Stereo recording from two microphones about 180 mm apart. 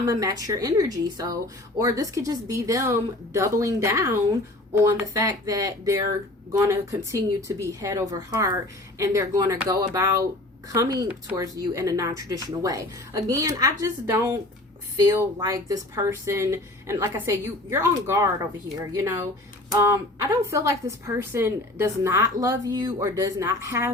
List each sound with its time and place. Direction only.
0.1 s a woman's voice: 20° right (ahead or behind)
11.1 s a woman's voice: 10° right (ahead or behind)
20.5 s speech: 15° right (ahead or behind)